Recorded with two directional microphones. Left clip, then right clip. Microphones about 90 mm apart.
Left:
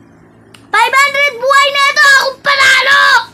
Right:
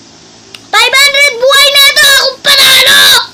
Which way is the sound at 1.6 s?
35° left (ahead or behind).